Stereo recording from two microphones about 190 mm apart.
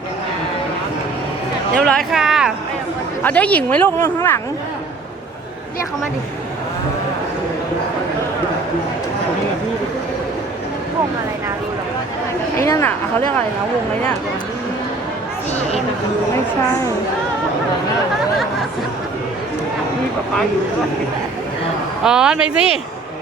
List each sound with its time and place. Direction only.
1.8 s a sound: 5° left (ahead or behind)
3.2 s speech: 5° left (ahead or behind)
12.5 s speech: 15° left (ahead or behind)
22.0 s speech: 5° right (ahead or behind)